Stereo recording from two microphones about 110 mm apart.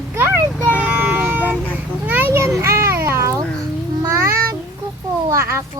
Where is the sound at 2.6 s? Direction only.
25° right (ahead or behind).